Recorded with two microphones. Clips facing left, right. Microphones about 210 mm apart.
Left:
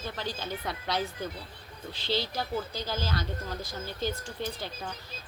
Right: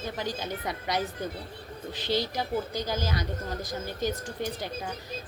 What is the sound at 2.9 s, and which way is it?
Speech, 15° right (ahead or behind).